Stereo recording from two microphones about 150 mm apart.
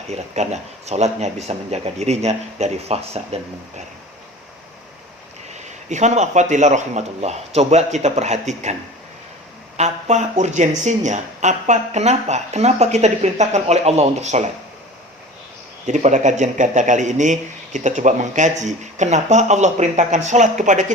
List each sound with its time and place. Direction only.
0.1 s speech: 45° right (ahead or behind)
5.5 s speech: 50° right (ahead or behind)
9.7 s speech: 50° right (ahead or behind)
15.9 s speech: 55° right (ahead or behind)